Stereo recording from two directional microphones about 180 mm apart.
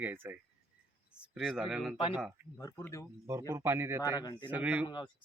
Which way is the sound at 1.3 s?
5° right (ahead or behind).